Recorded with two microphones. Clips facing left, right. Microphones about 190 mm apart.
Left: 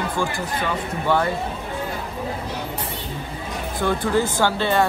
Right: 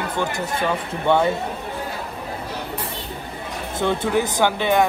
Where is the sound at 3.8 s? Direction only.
20° right (ahead or behind).